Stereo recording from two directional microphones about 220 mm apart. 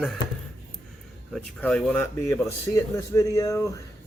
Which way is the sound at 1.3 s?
5° left (ahead or behind).